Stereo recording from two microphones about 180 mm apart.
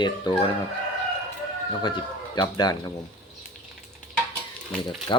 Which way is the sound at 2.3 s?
25° left (ahead or behind).